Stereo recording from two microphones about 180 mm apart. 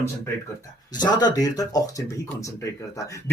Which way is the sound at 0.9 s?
25° left (ahead or behind).